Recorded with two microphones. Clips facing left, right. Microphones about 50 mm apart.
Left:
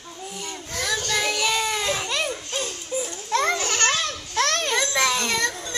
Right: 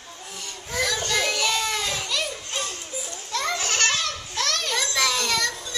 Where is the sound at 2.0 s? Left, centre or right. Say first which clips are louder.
Left 2 dB; left.